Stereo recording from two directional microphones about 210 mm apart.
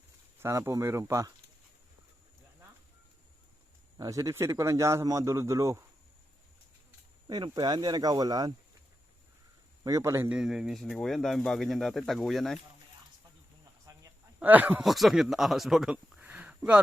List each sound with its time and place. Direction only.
0.3 s a man's voice: 15° right (ahead or behind)
3.9 s a man's voice: 15° right (ahead or behind)
7.3 s speech: 20° right (ahead or behind)
9.8 s speech: 15° right (ahead or behind)
13.9 s a sound: 15° right (ahead or behind)
14.3 s speech: 10° right (ahead or behind)